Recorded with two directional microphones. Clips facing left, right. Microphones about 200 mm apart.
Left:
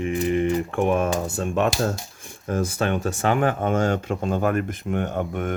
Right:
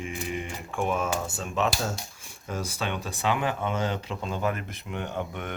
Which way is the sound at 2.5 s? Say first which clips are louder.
Left 8 dB; 50° left (ahead or behind).